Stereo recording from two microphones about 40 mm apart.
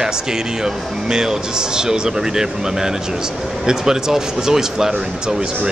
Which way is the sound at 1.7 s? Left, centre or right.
Centre.